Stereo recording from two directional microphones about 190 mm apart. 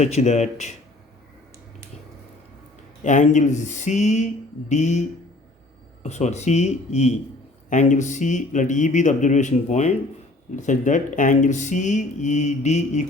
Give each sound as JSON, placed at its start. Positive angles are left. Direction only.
{"t": 0.0, "sound": "speech", "side_deg": 35}
{"t": 3.0, "sound": "speech", "side_deg": 40}